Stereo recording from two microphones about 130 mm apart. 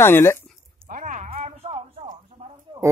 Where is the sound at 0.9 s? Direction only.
75° right (ahead or behind).